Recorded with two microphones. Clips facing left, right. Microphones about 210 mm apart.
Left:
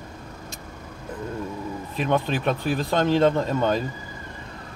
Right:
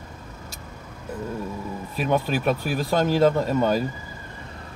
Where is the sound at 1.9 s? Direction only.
5° right (ahead or behind).